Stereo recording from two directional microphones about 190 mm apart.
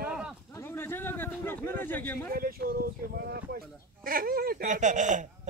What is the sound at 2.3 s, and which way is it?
Speech, 50° right (ahead or behind).